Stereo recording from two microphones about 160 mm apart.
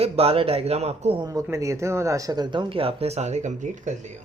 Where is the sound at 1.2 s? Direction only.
20° right (ahead or behind); by 4.1 s 50° right (ahead or behind).